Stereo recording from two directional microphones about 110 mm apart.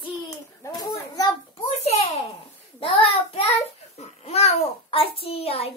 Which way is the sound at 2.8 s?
55° left (ahead or behind).